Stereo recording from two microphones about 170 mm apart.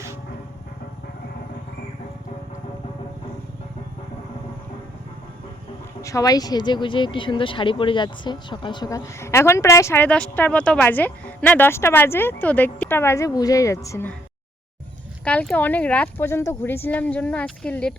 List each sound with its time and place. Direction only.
6.0 s speech: 20° left (ahead or behind)
15.2 s speech: 5° left (ahead or behind)